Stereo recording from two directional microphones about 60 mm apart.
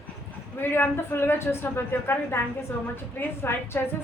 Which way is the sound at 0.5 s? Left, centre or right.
Left.